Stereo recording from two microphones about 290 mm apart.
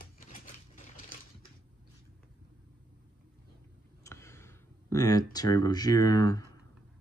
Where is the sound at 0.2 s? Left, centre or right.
Left.